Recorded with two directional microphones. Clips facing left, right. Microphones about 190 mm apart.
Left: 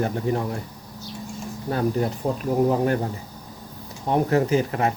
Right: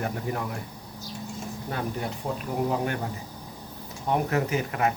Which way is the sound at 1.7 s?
35° left (ahead or behind).